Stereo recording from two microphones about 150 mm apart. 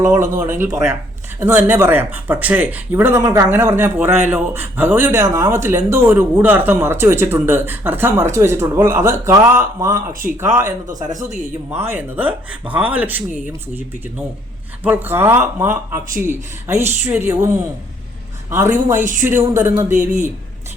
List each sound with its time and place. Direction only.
0.1 s speech: 15° right (ahead or behind)
10.1 s speech: 65° right (ahead or behind)
10.4 s speech: 15° right (ahead or behind)
14.8 s speech: 15° right (ahead or behind)
19.0 s speech: 60° right (ahead or behind)
19.3 s speech: 15° right (ahead or behind)